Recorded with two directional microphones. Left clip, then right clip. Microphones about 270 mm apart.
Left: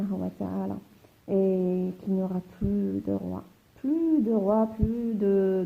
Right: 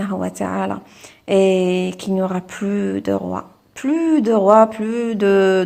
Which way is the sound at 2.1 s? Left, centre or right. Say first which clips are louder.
Right 11 dB; right.